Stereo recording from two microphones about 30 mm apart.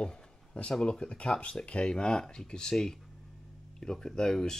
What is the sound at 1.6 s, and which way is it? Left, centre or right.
Speech, left.